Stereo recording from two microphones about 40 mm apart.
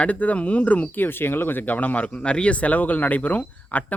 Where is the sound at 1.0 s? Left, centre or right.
Left.